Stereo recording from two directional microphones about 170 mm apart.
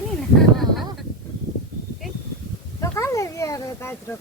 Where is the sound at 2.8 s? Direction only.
15° left (ahead or behind).